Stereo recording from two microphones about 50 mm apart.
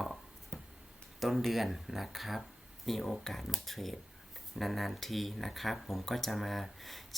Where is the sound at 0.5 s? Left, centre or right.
Left.